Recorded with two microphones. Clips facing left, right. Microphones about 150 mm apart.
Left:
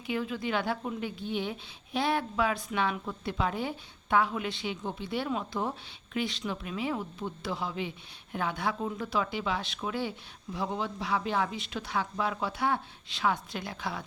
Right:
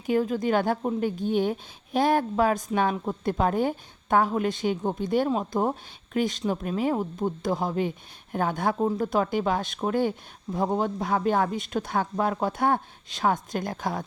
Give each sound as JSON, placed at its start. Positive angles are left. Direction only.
{"t": 0.0, "sound": "speech", "side_deg": -45}